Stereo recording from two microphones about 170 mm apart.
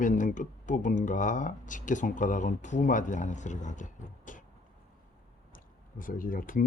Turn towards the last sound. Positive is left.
turn(degrees=55)  # may be behind; listen again after turning